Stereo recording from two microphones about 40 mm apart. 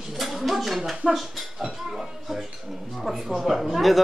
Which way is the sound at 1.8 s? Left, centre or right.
Centre.